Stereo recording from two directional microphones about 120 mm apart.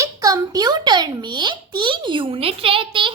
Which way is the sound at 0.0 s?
30° right (ahead or behind).